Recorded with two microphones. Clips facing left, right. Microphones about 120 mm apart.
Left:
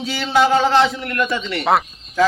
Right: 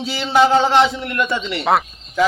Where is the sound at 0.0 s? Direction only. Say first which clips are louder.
Right 1 dB; 30° right (ahead or behind).